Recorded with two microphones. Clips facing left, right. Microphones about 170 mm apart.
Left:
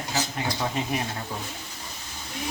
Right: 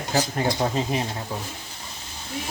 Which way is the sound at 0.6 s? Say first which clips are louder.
Right 4 dB; 30° right (ahead or behind).